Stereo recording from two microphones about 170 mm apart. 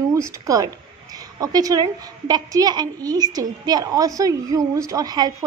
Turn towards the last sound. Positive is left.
turn(degrees=-25)  # may be behind; listen again after turning